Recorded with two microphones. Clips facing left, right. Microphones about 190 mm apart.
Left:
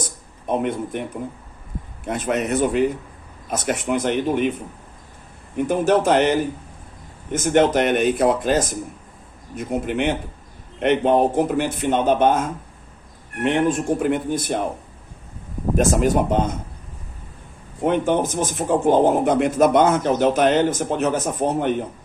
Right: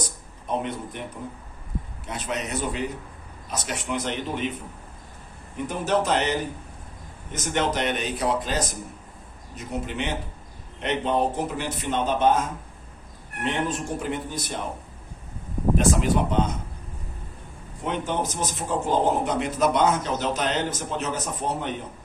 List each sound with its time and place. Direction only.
0.4 s speech: 55° left (ahead or behind)
2.0 s a man's voice: 50° left (ahead or behind)
5.5 s a man's voice: 55° left (ahead or behind)
13.4 s speech: 50° left (ahead or behind)
15.8 s a man's voice: 45° left (ahead or behind)
17.8 s a man's voice: 55° left (ahead or behind)